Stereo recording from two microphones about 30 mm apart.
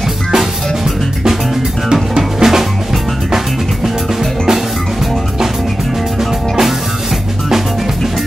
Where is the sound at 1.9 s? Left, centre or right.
Right.